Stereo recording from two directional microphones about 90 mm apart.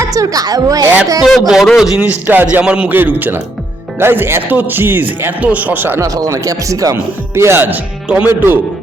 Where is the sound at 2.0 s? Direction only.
20° right (ahead or behind).